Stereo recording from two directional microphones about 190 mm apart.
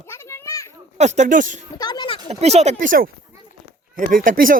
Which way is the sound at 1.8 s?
20° left (ahead or behind).